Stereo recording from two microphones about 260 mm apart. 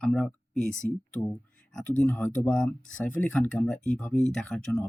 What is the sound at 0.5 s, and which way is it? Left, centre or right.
Speech, left.